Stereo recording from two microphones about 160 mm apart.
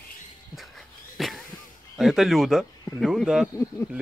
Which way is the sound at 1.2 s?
Centre (ahead or behind).